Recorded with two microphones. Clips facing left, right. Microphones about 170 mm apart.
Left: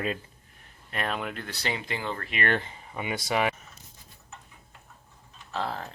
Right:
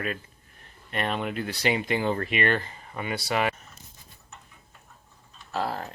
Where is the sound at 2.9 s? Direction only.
10° left (ahead or behind).